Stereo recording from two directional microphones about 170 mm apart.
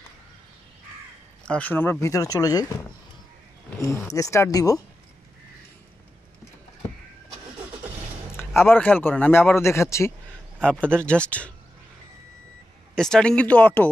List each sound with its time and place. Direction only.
1.4 s speech: 10° left (ahead or behind)
3.8 s speech: 15° left (ahead or behind)
8.4 s speech: 15° left (ahead or behind)
10.6 s speech: 5° left (ahead or behind)
12.9 s speech: 5° left (ahead or behind)